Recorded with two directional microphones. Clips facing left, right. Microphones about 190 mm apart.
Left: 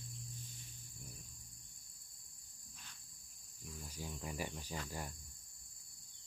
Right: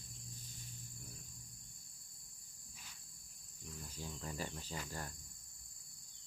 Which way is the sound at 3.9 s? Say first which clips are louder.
Left 1 dB; 10° left (ahead or behind).